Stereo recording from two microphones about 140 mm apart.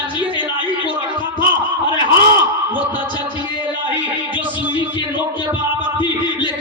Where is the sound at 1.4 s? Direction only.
35° left (ahead or behind).